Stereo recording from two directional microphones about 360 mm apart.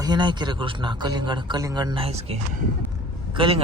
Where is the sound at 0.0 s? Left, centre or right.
Centre.